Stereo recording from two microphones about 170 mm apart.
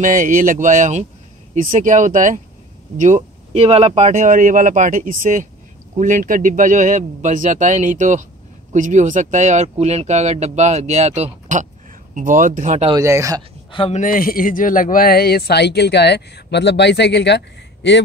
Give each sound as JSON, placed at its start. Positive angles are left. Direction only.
{"t": 0.0, "sound": "speech", "side_deg": -50}
{"t": 12.9, "sound": "speech", "side_deg": -20}
{"t": 13.7, "sound": "speech", "side_deg": 30}
{"t": 13.9, "sound": "speech", "side_deg": 55}